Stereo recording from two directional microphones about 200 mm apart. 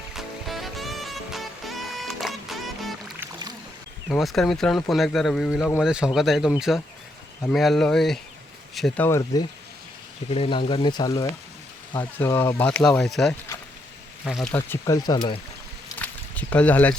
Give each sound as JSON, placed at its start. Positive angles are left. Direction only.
{"t": 0.1, "sound": "music", "side_deg": 0}
{"t": 4.1, "sound": "a man's voice", "side_deg": 0}
{"t": 9.0, "sound": "speech", "side_deg": 15}
{"t": 10.3, "sound": "a man's voice", "side_deg": 25}
{"t": 14.5, "sound": "speech", "side_deg": 15}
{"t": 16.0, "sound": "a sound", "side_deg": 5}